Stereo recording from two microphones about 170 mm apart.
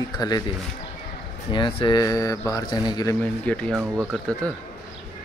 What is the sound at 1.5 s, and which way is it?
Speech, 30° left (ahead or behind).